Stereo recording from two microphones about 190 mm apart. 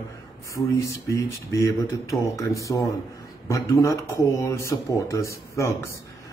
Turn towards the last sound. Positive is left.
turn(degrees=15)  # may be behind; listen again after turning